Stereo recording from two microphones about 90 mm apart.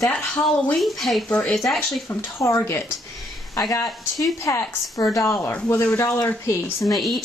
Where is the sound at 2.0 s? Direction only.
30° left (ahead or behind).